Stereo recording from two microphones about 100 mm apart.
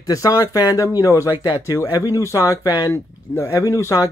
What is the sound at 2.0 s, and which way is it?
Speech, 30° left (ahead or behind).